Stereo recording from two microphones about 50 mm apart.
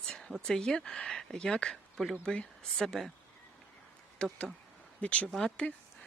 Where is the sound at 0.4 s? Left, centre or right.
Centre.